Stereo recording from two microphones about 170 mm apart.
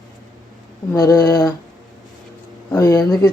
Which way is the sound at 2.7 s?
20° left (ahead or behind).